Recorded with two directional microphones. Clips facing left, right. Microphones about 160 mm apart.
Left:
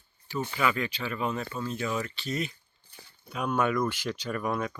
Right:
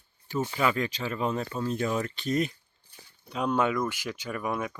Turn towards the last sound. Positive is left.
turn(degrees=-10)  # may be behind; listen again after turning